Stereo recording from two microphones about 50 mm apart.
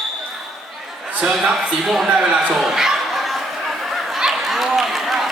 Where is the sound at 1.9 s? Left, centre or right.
Centre.